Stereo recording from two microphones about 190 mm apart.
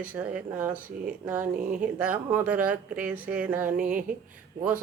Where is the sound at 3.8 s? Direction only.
45° right (ahead or behind).